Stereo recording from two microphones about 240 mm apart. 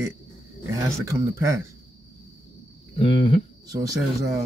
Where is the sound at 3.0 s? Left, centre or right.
Left.